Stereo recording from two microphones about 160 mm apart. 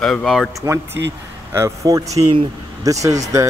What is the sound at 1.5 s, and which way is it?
Speech, 20° right (ahead or behind).